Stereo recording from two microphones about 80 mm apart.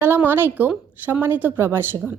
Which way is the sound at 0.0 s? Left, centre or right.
Right.